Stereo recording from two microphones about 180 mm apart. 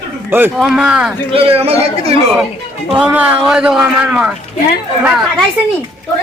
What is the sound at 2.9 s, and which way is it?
A man's voice, 5° right (ahead or behind).